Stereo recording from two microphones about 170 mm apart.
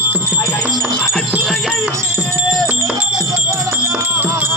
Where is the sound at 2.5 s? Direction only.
Centre (ahead or behind).